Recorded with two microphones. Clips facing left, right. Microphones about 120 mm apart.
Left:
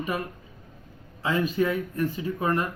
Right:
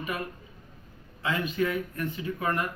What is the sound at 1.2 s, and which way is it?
Speech, 35° left (ahead or behind).